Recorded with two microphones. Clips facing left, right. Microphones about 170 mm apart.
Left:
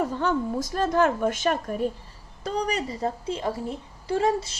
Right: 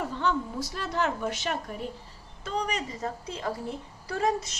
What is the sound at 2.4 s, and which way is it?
A woman's voice, 35° left (ahead or behind).